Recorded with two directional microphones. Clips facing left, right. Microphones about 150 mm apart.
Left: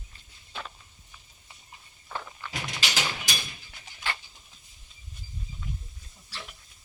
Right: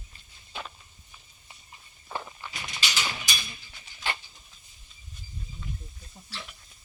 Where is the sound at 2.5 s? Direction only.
90° left.